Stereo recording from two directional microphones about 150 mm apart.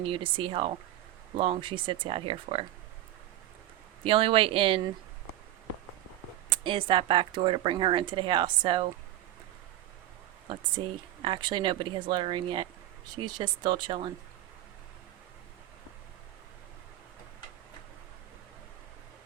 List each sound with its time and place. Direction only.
0.0 s speech: 35° right (ahead or behind)
4.0 s speech: 35° right (ahead or behind)
6.5 s speech: 35° right (ahead or behind)
10.5 s speech: 35° right (ahead or behind)